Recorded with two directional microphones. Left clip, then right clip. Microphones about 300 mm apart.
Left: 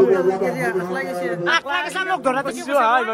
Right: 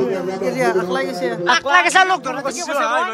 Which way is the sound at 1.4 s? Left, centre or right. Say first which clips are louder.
Right 3 dB; left.